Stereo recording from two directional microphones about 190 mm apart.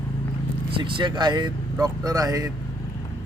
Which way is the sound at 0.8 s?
25° right (ahead or behind).